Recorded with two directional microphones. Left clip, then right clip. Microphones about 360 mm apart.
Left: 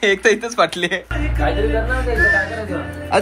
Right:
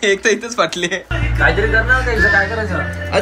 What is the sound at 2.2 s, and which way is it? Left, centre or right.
Speech, centre.